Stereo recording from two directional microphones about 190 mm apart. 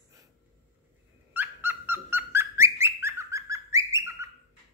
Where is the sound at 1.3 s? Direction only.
10° right (ahead or behind).